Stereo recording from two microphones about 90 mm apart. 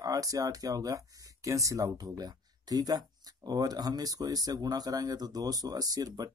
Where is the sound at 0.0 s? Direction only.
40° right (ahead or behind).